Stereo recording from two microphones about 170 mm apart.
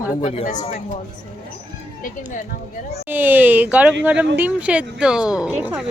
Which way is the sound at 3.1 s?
10° right (ahead or behind).